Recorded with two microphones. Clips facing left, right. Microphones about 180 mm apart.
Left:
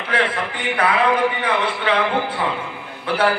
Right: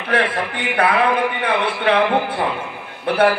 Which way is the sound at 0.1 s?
60° right (ahead or behind).